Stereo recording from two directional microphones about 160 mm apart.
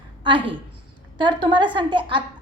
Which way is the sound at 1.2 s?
30° right (ahead or behind).